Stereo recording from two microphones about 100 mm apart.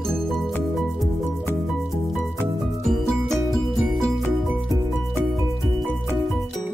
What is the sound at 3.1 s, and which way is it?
Music, centre (ahead or behind).